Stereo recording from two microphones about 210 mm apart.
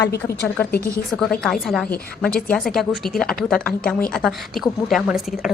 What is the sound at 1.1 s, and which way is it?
A woman's voice, 5° left (ahead or behind).